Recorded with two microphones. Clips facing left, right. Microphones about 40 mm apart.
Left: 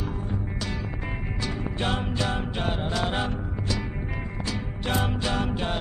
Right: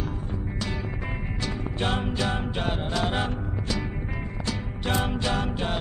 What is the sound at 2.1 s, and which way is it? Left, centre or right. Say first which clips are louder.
Music: right 1 dB; centre.